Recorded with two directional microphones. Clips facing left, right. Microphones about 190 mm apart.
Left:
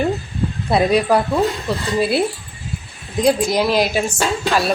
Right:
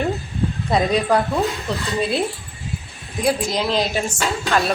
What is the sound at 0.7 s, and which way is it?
A woman's voice, 5° left (ahead or behind).